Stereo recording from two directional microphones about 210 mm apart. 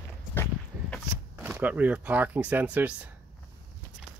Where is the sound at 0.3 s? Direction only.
10° left (ahead or behind).